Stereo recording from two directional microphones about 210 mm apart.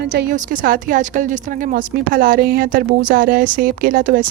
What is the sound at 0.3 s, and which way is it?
Speech, 40° right (ahead or behind).